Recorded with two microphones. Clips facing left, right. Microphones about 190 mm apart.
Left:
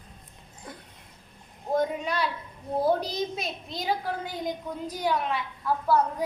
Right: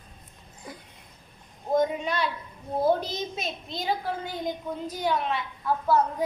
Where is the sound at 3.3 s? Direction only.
5° left (ahead or behind).